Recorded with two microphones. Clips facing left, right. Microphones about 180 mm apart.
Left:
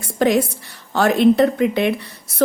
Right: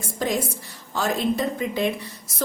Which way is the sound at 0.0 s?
70° left (ahead or behind).